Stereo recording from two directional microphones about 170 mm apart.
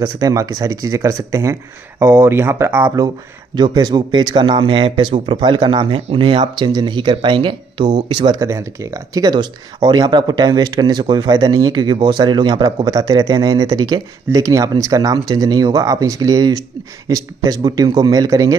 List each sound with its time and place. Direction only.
0.0 s speech: 20° right (ahead or behind)
3.5 s speech: 25° right (ahead or behind)